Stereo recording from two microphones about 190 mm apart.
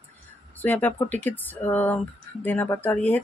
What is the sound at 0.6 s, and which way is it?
Speech, 10° left (ahead or behind).